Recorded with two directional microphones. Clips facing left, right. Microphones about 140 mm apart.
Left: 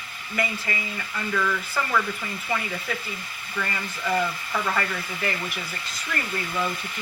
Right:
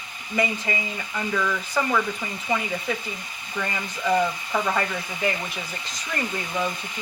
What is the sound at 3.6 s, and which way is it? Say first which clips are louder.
Speech: right 3 dB; 15° right (ahead or behind).